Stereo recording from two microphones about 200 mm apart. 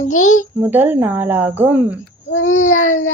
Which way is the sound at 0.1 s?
90° left.